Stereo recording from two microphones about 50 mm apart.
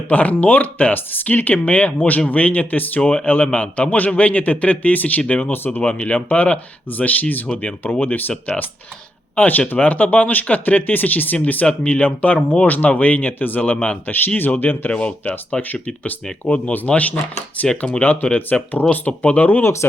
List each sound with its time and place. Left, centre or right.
0.1 s speech: left
3.0 s speech: centre; by 11.3 s left
11.6 s speech: left
13.7 s speech: left
14.1 s speech: left
14.9 s speech: left